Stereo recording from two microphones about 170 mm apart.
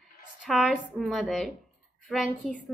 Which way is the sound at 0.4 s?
Centre (ahead or behind).